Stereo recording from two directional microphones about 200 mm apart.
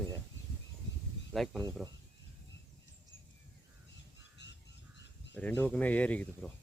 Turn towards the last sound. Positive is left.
turn(degrees=5)  # may be behind; listen again after turning